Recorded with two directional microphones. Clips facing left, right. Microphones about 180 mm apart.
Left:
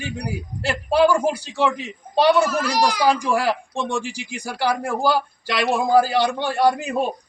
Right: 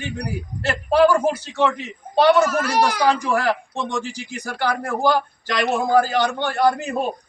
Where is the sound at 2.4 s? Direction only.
55° right (ahead or behind).